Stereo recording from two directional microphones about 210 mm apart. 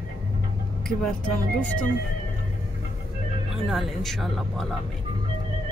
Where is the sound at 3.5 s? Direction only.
Centre (ahead or behind).